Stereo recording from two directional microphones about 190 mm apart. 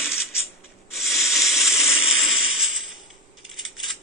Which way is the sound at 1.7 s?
35° left (ahead or behind).